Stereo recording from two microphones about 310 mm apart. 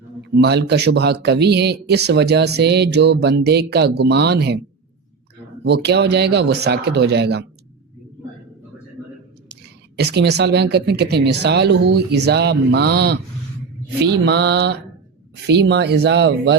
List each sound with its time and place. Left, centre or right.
0.3 s speech: right
5.6 s speech: right
10.0 s speech: right